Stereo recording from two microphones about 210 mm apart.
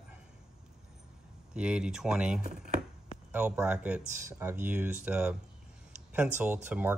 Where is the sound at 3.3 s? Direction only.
5° right (ahead or behind).